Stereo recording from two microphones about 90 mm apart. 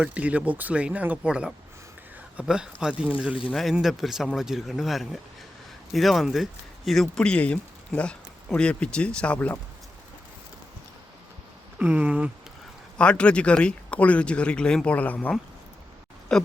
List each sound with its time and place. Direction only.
0.0 s speech: 15° right (ahead or behind); by 9.6 s 15° left (ahead or behind)
11.8 s speech: 20° right (ahead or behind)
13.0 s speech: 10° left (ahead or behind)
16.3 s speech: 5° left (ahead or behind)